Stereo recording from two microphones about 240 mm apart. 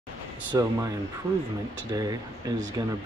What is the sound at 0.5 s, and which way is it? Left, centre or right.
Speech, centre.